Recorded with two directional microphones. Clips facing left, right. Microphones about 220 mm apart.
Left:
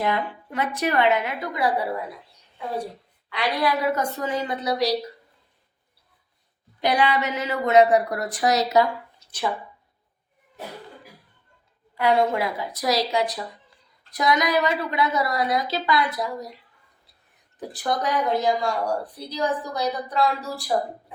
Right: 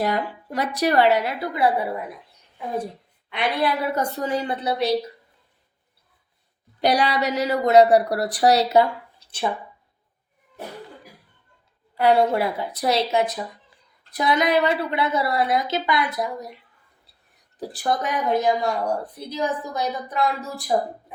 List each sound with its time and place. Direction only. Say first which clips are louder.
0.0 s speech: right 1 dB; 40° right (ahead or behind)
3.2 s a woman's voice: right 1 dB; 25° right (ahead or behind)
6.8 s speech: right 1 dB; 35° right (ahead or behind)
11.9 s a woman's voice: right 3 dB; 35° right (ahead or behind)
17.6 s a woman's voice: right 1 dB; 30° right (ahead or behind)